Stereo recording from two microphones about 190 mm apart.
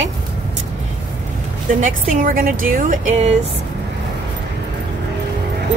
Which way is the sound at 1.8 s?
45° right (ahead or behind).